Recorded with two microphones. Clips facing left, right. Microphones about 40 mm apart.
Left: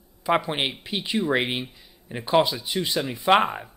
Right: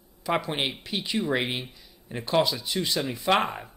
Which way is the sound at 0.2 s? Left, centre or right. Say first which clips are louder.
Left 4 dB; centre.